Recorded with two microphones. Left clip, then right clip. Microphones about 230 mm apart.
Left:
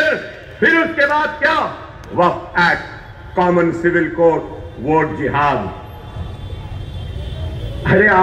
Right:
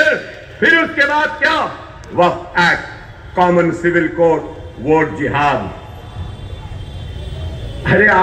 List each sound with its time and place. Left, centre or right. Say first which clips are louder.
0.6 s a man's voice: right 1 dB; right
7.8 s a man's voice: right 1 dB; right